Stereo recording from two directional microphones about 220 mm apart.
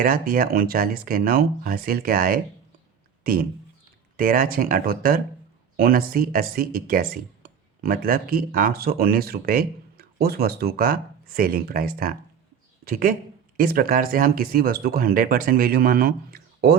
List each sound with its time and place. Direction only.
0.0 s speech: 40° right (ahead or behind)